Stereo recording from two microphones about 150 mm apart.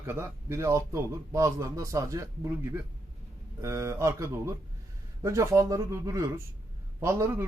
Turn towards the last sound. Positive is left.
turn(degrees=-20)  # may be behind; listen again after turning